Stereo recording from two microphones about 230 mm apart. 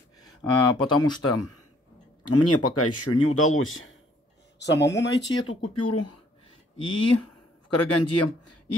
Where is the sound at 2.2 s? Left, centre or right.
Left.